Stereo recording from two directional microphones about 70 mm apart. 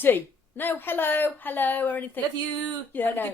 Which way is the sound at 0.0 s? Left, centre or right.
Left.